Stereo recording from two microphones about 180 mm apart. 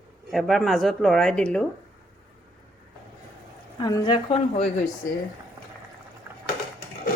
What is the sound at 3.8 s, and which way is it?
Speech, 20° left (ahead or behind).